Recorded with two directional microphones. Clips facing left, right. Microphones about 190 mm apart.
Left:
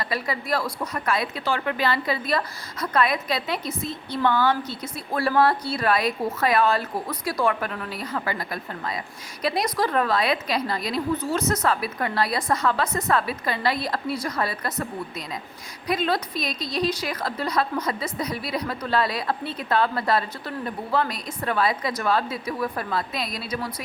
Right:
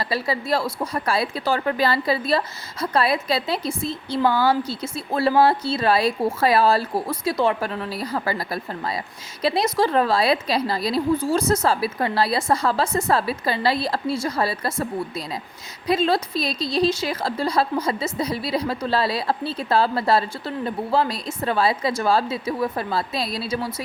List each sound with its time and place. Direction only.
0.0 s a woman's voice: 30° right (ahead or behind)
15.9 s a woman's voice: 30° right (ahead or behind)